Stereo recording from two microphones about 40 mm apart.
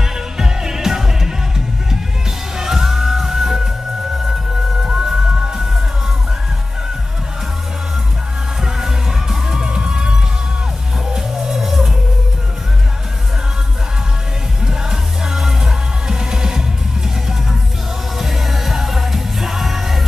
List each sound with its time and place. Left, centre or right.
0.0 s music: centre
2.5 s music: centre
8.6 s music: centre
14.7 s music: centre